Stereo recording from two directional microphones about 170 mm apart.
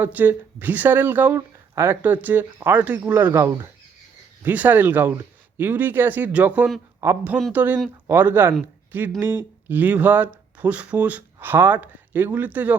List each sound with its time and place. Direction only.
0.0 s speech: 10° right (ahead or behind)